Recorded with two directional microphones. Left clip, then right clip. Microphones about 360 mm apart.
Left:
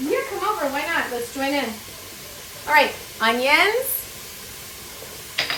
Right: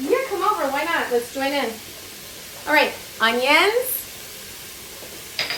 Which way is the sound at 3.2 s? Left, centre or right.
Centre.